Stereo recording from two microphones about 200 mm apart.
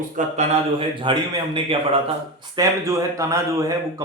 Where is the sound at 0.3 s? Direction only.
25° right (ahead or behind).